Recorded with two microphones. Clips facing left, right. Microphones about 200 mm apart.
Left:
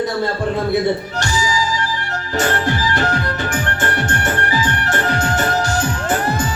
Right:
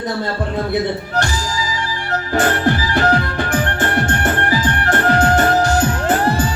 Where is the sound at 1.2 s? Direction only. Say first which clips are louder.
Left 2 dB; 55° right (ahead or behind).